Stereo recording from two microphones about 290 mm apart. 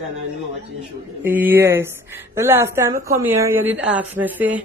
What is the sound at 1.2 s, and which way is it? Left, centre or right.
A woman's voice, centre.